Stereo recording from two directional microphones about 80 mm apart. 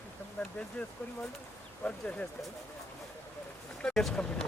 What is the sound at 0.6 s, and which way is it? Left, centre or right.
Speech, centre.